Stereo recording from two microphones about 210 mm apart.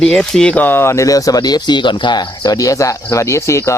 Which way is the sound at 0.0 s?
Centre (ahead or behind).